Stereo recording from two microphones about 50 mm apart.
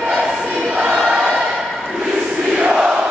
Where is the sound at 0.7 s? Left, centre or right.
Centre.